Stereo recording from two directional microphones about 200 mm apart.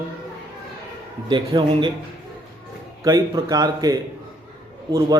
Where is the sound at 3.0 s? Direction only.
15° right (ahead or behind).